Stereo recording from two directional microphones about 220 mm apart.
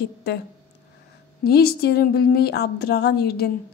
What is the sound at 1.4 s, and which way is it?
Speech, 45° left (ahead or behind).